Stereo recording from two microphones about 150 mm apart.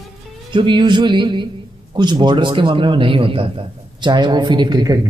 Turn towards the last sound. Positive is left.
turn(degrees=-30)  # may be behind; listen again after turning